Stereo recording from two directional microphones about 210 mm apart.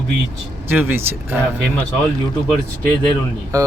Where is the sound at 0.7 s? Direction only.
10° right (ahead or behind).